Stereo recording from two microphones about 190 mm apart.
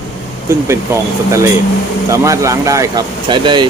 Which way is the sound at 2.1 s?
15° right (ahead or behind).